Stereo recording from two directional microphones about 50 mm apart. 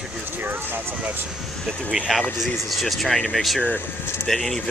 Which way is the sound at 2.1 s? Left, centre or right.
Centre.